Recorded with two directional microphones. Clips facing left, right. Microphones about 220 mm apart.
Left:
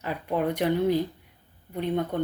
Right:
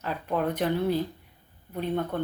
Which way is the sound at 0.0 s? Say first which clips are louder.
Left 1 dB; 10° left (ahead or behind).